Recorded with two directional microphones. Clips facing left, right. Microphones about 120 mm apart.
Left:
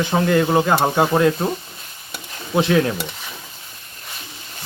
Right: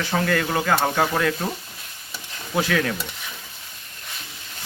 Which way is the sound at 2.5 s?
25° left (ahead or behind).